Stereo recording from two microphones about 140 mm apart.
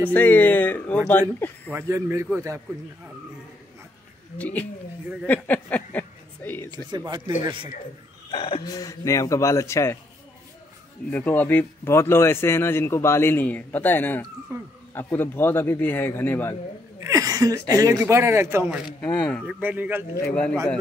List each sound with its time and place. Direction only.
0.1 s speech: 10° left (ahead or behind)
1.7 s a man's voice: 20° right (ahead or behind)
4.4 s a woman's voice: 10° left (ahead or behind)
7.0 s speech: 30° right (ahead or behind)
8.3 s speech: 40° left (ahead or behind)
8.6 s speech: 25° left (ahead or behind)
11.1 s speech: 10° left (ahead or behind)
14.5 s a man's voice: 20° right (ahead or behind)
15.0 s speech: 15° left (ahead or behind)
17.0 s speech: 25° right (ahead or behind)
18.9 s speech: 10° left (ahead or behind)
19.4 s speech: 10° right (ahead or behind)
20.2 s speech: 10° left (ahead or behind)